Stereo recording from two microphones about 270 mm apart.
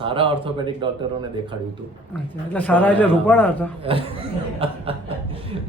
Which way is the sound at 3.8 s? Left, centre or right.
Right.